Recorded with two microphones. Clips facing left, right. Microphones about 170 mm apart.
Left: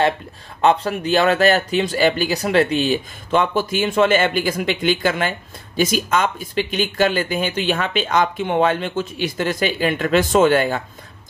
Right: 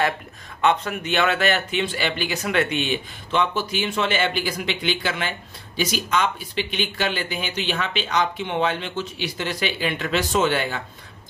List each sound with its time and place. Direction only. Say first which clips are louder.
0.6 s speech: left 4 dB; 35° left (ahead or behind)